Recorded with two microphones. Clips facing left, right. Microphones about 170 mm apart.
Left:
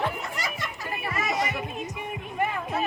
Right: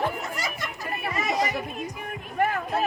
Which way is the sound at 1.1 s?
20° right (ahead or behind).